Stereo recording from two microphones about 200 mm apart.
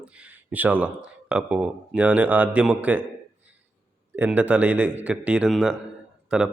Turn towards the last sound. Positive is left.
turn(degrees=-5)  # may be behind; listen again after turning